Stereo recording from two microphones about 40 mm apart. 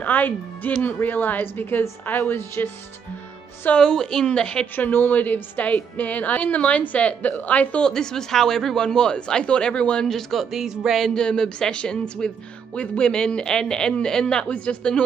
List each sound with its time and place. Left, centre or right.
0.0 s a woman's voice: left
3.7 s a man's voice: centre
4.7 s a woman's voice: left
7.8 s speech: centre
8.8 s a man's voice: left
10.0 s a man's voice: centre
10.5 s speech: centre
11.1 s a man's voice: left